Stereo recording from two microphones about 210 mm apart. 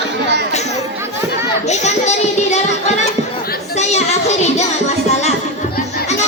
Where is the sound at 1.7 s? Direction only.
30° left (ahead or behind).